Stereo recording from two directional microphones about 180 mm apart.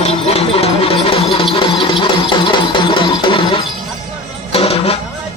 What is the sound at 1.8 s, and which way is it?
Music, 30° left (ahead or behind).